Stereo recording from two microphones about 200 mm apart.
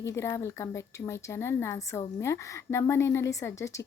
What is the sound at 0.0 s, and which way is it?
Speech, 15° left (ahead or behind).